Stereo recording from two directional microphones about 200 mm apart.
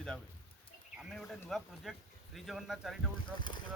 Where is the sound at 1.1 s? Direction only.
Centre (ahead or behind).